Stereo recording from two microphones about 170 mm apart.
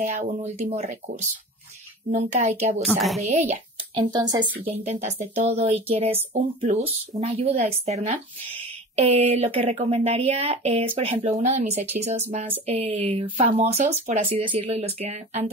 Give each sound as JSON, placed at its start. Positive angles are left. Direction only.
{"t": 0.0, "sound": "speech", "side_deg": -45}
{"t": 2.8, "sound": "a woman's voice", "side_deg": 0}
{"t": 3.3, "sound": "a child's voice", "side_deg": -40}
{"t": 4.0, "sound": "speech", "side_deg": -25}
{"t": 4.8, "sound": "speech", "side_deg": -40}